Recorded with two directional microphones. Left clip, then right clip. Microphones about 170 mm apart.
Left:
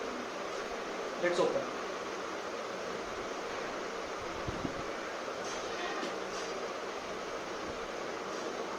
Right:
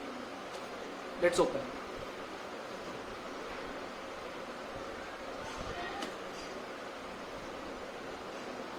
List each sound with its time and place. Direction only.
1.2 s speech: 25° right (ahead or behind)